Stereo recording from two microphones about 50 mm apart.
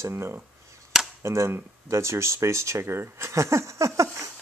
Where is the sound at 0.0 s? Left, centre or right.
Right.